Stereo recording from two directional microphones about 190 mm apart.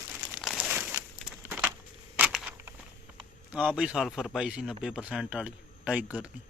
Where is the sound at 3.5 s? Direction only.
5° right (ahead or behind).